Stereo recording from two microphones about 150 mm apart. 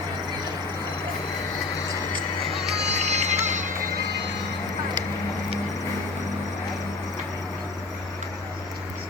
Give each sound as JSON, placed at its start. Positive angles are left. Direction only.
{"t": 2.1, "sound": "music", "side_deg": -45}